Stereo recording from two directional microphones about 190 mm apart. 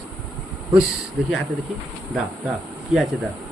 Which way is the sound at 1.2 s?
Centre (ahead or behind).